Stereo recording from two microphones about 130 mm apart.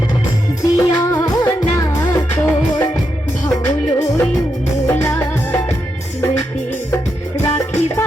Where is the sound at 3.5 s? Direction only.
20° left (ahead or behind).